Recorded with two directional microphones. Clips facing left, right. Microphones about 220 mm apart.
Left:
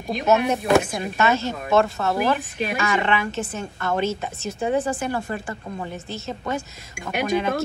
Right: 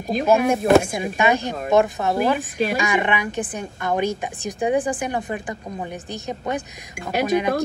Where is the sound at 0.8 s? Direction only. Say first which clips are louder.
Right 2 dB; 15° right (ahead or behind).